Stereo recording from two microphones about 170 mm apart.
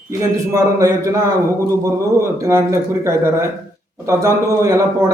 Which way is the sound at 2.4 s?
20° right (ahead or behind).